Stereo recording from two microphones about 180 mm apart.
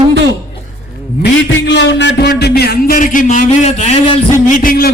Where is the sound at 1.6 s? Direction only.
75° left (ahead or behind); by 4.2 s 35° left (ahead or behind).